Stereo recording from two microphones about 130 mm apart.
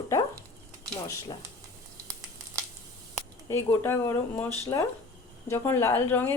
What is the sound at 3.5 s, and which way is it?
A woman's voice, 20° left (ahead or behind).